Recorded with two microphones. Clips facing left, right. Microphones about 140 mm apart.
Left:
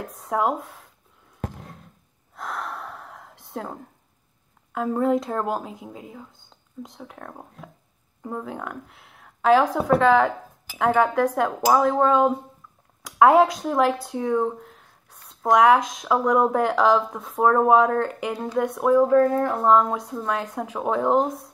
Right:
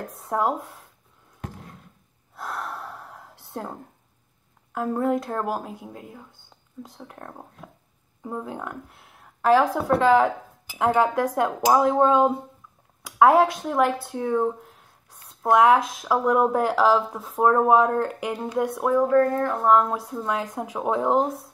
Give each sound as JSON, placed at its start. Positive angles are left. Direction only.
{"t": 0.0, "sound": "speech", "side_deg": 0}
{"t": 2.3, "sound": "gasp", "side_deg": -5}
{"t": 4.7, "sound": "a woman's voice", "side_deg": 0}
{"t": 18.9, "sound": "speech", "side_deg": 5}
{"t": 19.3, "sound": "speech", "side_deg": 15}
{"t": 19.7, "sound": "speech", "side_deg": 0}